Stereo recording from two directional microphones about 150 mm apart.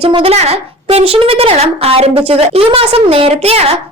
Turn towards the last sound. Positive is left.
turn(degrees=-40)  # may be behind; listen again after turning